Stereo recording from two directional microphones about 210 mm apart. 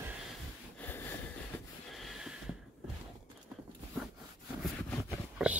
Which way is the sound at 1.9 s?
Centre (ahead or behind).